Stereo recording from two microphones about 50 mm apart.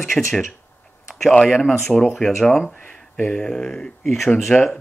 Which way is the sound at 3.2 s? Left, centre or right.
Centre.